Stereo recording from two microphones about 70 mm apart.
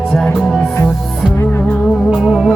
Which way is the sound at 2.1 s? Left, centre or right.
Centre.